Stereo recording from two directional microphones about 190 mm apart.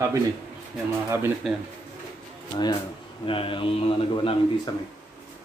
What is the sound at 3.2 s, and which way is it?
A man's voice, 25° left (ahead or behind).